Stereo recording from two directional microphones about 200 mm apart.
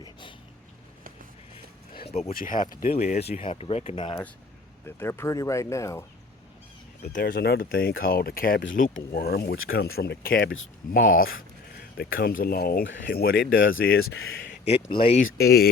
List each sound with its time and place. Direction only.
0.0 s a sound: 25° left (ahead or behind)
2.0 s speech: 30° left (ahead or behind)
2.3 s speech: 45° left (ahead or behind); by 4.2 s 25° left (ahead or behind)
4.9 s speech: 10° left (ahead or behind)
7.0 s speech: 40° left (ahead or behind)
10.5 s speech: 75° left (ahead or behind)
11.0 s speech: 45° left (ahead or behind)
14.7 s speech: 25° left (ahead or behind)
15.4 s speech: 50° left (ahead or behind)